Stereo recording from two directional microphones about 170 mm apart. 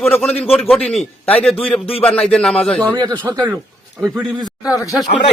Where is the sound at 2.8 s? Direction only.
25° right (ahead or behind).